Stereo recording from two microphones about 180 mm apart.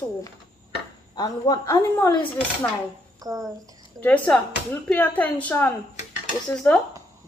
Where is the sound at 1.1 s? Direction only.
25° left (ahead or behind).